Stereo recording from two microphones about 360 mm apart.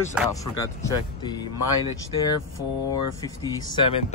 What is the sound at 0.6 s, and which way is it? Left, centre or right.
Speech, centre.